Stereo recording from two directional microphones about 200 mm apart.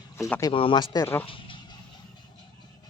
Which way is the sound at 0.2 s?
15° left (ahead or behind).